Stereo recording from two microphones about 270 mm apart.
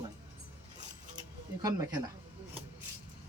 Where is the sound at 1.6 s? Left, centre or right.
Centre.